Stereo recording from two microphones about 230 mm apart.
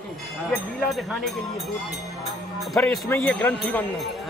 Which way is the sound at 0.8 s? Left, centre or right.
Centre.